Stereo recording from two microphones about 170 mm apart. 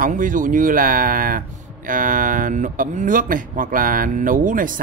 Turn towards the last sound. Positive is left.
turn(degrees=-50)  # may be behind; listen again after turning